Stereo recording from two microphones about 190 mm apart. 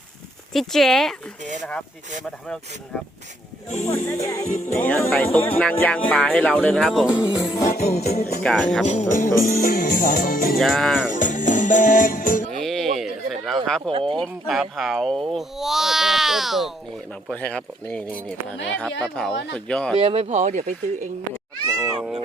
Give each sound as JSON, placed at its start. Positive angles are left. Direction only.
{"t": 0.5, "sound": "speech", "side_deg": 0}
{"t": 3.7, "sound": "music", "side_deg": 35}
{"t": 4.0, "sound": "speech", "side_deg": 15}
{"t": 4.4, "sound": "music", "side_deg": 40}
{"t": 4.7, "sound": "speech", "side_deg": 10}
{"t": 7.1, "sound": "music", "side_deg": 20}
{"t": 7.7, "sound": "music", "side_deg": 35}
{"t": 8.4, "sound": "speech", "side_deg": 5}
{"t": 8.9, "sound": "speech", "side_deg": 40}
{"t": 10.6, "sound": "speech", "side_deg": 0}
{"t": 11.1, "sound": "music", "side_deg": 40}
{"t": 12.5, "sound": "a sound", "side_deg": 0}
{"t": 13.7, "sound": "speech", "side_deg": 5}
{"t": 20.0, "sound": "speech", "side_deg": -30}